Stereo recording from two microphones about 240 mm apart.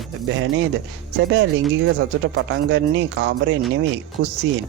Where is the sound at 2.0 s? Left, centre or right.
Right.